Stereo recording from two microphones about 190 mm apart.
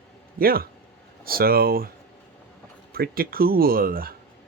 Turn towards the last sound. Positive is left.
turn(degrees=-50)  # may be behind; listen again after turning